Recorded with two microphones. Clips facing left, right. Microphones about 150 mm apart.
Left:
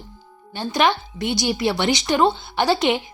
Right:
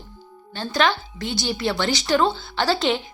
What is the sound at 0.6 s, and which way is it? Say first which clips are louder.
Speech: left 2 dB; 20° left (ahead or behind).